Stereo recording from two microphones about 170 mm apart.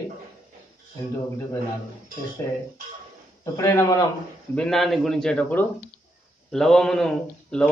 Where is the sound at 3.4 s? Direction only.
20° left (ahead or behind).